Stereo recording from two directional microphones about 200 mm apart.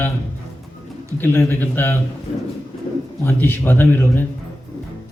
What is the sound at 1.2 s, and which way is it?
Speech, 10° left (ahead or behind).